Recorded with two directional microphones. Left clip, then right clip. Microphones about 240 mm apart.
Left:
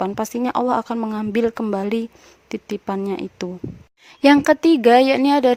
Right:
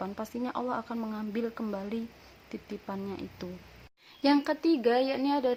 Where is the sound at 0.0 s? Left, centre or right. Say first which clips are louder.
Left 13 dB; left.